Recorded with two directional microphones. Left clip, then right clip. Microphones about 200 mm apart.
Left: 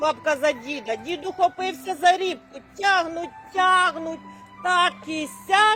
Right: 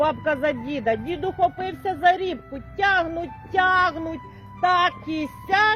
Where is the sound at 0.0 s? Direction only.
20° right (ahead or behind).